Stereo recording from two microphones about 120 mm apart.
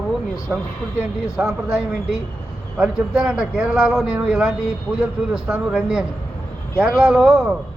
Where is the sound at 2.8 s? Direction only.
5° right (ahead or behind).